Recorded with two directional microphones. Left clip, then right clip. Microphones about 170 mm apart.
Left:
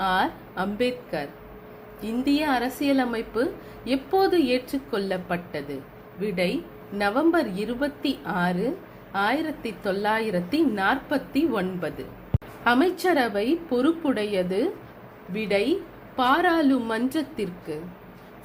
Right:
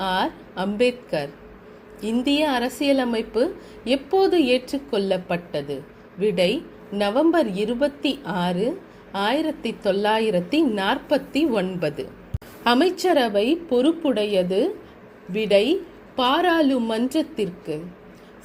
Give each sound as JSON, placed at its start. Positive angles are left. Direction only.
{"t": 0.0, "sound": "a woman's voice", "side_deg": -30}